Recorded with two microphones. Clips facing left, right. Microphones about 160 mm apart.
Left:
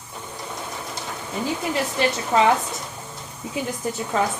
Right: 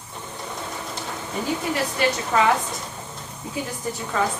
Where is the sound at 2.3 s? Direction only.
20° left (ahead or behind).